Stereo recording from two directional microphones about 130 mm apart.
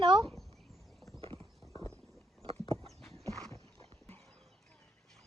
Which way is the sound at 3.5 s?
20° left (ahead or behind).